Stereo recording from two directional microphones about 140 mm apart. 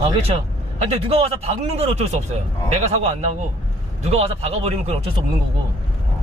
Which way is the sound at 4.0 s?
50° right (ahead or behind).